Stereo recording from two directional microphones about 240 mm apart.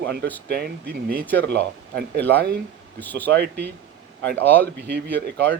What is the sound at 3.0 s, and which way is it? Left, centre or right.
Speech, centre.